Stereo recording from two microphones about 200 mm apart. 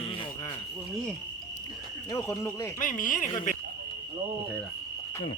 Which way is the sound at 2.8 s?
40° left (ahead or behind).